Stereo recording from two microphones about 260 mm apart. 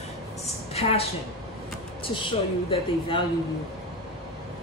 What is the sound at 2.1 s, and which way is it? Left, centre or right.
A woman's voice, centre.